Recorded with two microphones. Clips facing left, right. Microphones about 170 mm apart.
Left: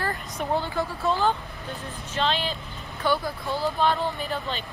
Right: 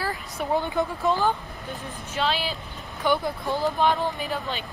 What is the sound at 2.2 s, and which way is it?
Speech, 5° right (ahead or behind).